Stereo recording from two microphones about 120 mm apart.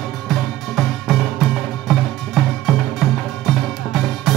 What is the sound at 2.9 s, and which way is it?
Music, centre (ahead or behind).